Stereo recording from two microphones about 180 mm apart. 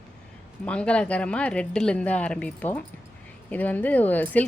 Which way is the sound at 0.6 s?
5° left (ahead or behind).